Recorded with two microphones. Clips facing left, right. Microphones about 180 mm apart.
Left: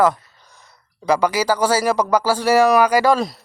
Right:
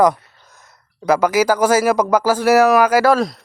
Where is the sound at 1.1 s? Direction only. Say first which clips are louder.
Right 3 dB; 10° right (ahead or behind).